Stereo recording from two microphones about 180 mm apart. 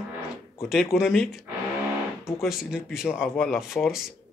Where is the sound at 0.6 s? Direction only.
Centre (ahead or behind).